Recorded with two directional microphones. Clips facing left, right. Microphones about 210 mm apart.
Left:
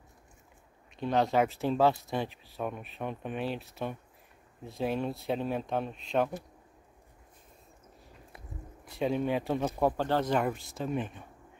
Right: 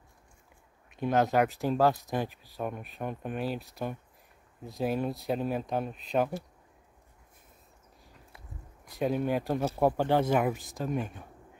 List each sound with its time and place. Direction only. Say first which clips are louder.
1.0 s speech: right 1 dB; centre (ahead or behind)
8.9 s speech: right 1 dB; 5° right (ahead or behind)